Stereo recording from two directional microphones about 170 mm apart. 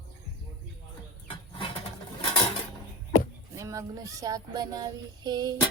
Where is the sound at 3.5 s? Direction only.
20° right (ahead or behind).